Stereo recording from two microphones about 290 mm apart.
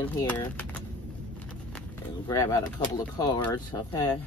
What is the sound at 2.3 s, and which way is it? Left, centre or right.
Speech, centre.